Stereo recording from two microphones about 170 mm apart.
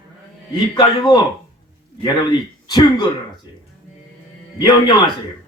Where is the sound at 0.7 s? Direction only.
25° left (ahead or behind).